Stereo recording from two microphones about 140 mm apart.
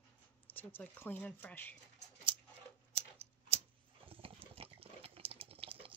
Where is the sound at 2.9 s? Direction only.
45° right (ahead or behind).